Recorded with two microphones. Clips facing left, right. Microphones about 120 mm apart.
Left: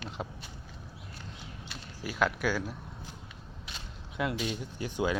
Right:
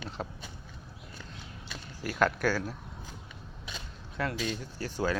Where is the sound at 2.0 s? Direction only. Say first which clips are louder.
Right 2 dB; 10° left (ahead or behind).